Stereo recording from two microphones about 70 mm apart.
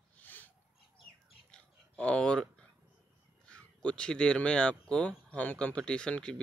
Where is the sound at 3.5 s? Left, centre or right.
Centre.